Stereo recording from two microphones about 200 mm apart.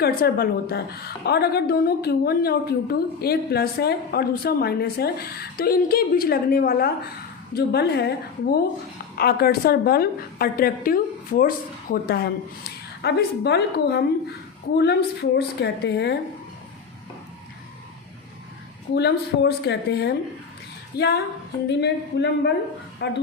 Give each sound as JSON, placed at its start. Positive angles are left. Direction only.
{"t": 0.0, "sound": "a woman's voice", "side_deg": 50}
{"t": 18.9, "sound": "a woman's voice", "side_deg": 55}